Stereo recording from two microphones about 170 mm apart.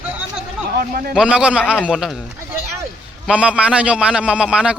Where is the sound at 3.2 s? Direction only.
5° right (ahead or behind).